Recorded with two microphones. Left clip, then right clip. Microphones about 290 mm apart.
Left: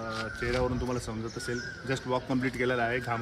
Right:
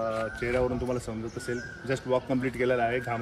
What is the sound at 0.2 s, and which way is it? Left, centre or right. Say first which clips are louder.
Speech: right 2 dB; centre.